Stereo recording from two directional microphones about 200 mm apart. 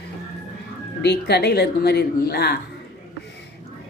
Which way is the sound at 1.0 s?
55° left (ahead or behind).